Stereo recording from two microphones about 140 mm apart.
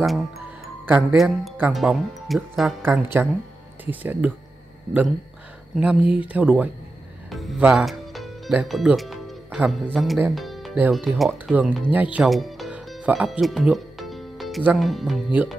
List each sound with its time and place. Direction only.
0.0 s speech: centre (ahead or behind)
2.8 s speech: 15° right (ahead or behind)
5.8 s speech: 10° right (ahead or behind)
7.2 s music: centre (ahead or behind)
9.9 s speech: centre (ahead or behind)
10.3 s music: centre (ahead or behind)
10.9 s speech: centre (ahead or behind)
11.5 s speech: 10° right (ahead or behind)
12.3 s music: centre (ahead or behind)
14.8 s speech: centre (ahead or behind)